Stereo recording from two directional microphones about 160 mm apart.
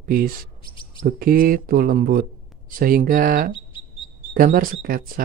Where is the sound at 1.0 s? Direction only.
60° right (ahead or behind).